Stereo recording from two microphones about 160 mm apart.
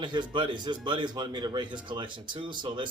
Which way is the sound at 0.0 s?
30° right (ahead or behind).